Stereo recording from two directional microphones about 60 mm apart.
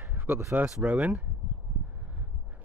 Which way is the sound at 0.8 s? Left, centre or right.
Right.